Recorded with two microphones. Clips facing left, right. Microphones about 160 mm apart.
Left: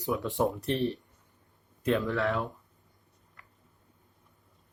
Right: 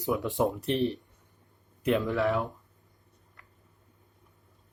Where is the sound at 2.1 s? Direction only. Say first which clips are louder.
Right 2 dB; 15° right (ahead or behind).